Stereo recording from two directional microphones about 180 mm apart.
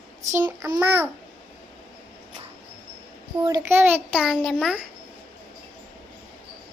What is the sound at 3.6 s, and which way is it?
A child's voice, 10° right (ahead or behind).